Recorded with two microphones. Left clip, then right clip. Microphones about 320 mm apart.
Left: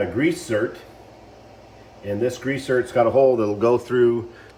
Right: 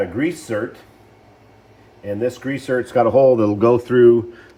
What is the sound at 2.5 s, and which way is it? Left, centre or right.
Speech, centre.